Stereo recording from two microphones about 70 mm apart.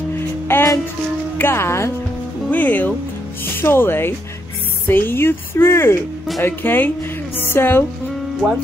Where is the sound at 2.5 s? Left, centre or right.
Left.